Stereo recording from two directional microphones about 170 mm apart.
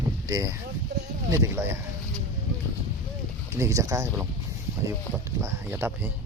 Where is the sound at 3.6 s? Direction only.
20° right (ahead or behind).